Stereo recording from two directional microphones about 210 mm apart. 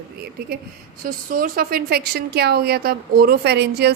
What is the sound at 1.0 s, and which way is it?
A woman's voice, 40° right (ahead or behind).